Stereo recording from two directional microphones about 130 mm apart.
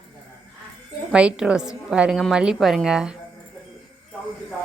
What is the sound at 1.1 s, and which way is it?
A woman's voice, 10° right (ahead or behind).